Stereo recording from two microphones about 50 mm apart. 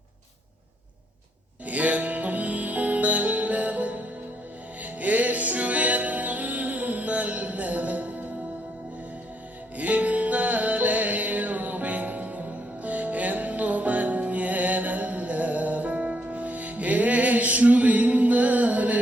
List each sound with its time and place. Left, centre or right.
1.6 s music: right
9.7 s music: right